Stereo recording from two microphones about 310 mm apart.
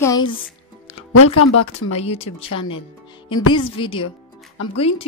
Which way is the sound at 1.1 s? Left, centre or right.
Left.